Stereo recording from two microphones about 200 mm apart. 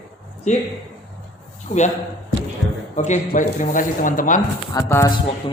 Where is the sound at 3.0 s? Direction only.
40° left (ahead or behind).